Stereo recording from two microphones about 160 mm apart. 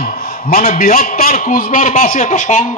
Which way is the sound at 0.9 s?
70° left (ahead or behind).